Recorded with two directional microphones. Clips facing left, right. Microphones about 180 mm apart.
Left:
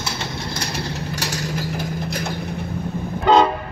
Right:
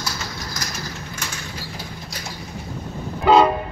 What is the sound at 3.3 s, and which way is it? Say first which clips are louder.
Vehicle: even; 5° right (ahead or behind).